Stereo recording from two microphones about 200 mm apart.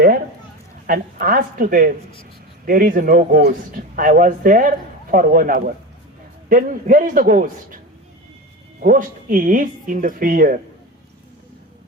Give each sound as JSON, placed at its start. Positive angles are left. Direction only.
{"t": 0.9, "sound": "a man's voice", "side_deg": -45}
{"t": 8.8, "sound": "a man's voice", "side_deg": -45}